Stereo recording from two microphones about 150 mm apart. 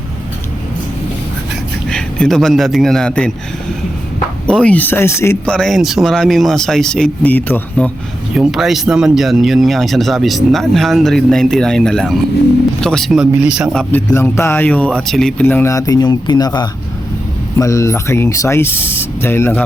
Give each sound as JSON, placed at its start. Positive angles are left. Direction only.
{"t": 1.9, "sound": "speech", "side_deg": 5}
{"t": 4.4, "sound": "speech", "side_deg": 5}
{"t": 5.5, "sound": "speech", "side_deg": 5}
{"t": 8.4, "sound": "speech", "side_deg": 0}
{"t": 13.9, "sound": "speech", "side_deg": 20}